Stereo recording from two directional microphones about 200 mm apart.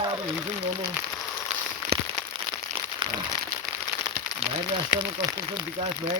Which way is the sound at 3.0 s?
25° right (ahead or behind).